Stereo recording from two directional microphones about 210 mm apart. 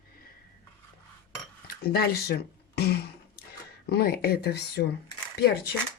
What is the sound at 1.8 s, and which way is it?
Speech, 45° left (ahead or behind).